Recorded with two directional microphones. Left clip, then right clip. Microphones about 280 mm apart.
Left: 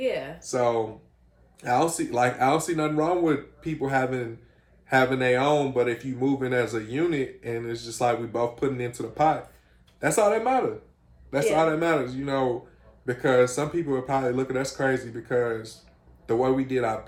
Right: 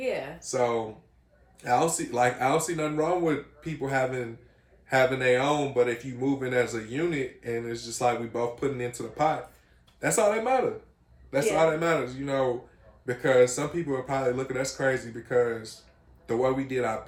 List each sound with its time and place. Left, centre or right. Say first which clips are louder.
0.0 s speech: left 3 dB; centre
0.3 s speech: left 2 dB; centre